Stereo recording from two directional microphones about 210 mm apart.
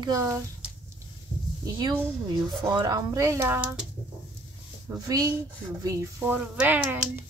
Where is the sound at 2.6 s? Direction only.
20° right (ahead or behind).